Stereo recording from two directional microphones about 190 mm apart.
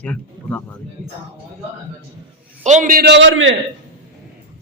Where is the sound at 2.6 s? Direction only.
40° right (ahead or behind); by 3.5 s 85° right.